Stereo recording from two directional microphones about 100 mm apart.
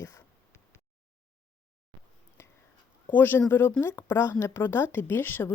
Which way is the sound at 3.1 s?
20° left (ahead or behind).